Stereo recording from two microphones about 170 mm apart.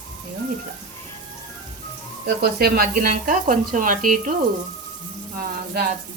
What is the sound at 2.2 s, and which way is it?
Speech, 65° right (ahead or behind).